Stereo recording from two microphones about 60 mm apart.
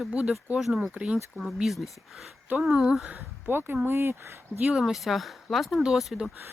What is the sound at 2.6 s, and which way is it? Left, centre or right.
Speech, centre.